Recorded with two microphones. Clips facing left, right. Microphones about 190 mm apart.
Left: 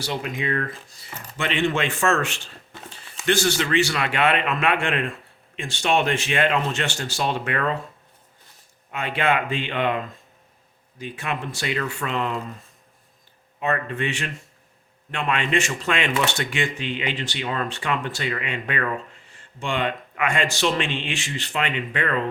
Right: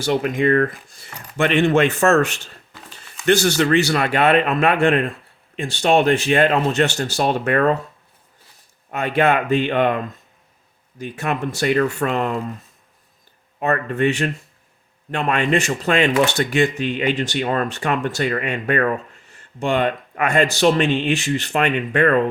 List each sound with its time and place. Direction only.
0.0 s speech: 55° right (ahead or behind)
8.9 s speech: 45° right (ahead or behind)
13.6 s speech: 45° right (ahead or behind)